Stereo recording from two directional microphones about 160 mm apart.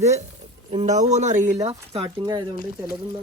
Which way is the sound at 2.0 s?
25° right (ahead or behind).